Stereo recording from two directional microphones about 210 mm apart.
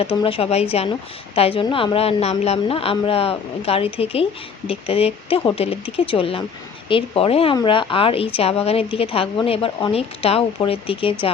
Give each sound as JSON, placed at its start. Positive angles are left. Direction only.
{"t": 0.0, "sound": "a woman's voice", "side_deg": 25}